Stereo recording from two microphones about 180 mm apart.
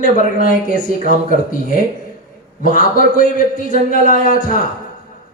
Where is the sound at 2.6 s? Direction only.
50° left (ahead or behind).